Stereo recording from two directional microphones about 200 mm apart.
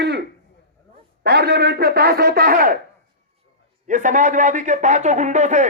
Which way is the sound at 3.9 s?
40° right (ahead or behind).